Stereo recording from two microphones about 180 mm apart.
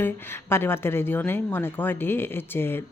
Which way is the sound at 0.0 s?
10° left (ahead or behind).